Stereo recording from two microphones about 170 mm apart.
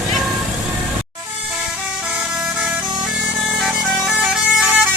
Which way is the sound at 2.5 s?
5° right (ahead or behind).